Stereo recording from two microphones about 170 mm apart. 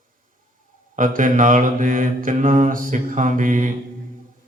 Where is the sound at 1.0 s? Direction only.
50° right (ahead or behind).